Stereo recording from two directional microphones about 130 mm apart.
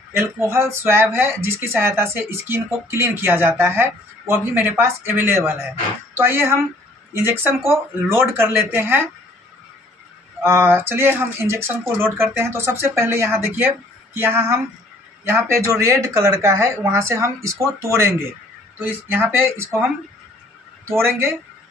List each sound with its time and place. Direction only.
0.1 s speech: 20° right (ahead or behind)
10.4 s speech: 20° right (ahead or behind)